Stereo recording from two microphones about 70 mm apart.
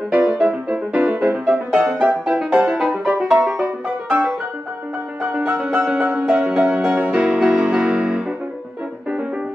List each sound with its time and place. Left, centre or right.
0.1 s music: centre